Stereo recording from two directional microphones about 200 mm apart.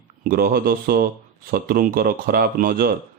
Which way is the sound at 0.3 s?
50° right (ahead or behind).